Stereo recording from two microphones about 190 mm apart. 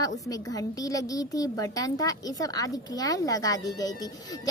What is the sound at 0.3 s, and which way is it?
A woman's voice, 20° left (ahead or behind).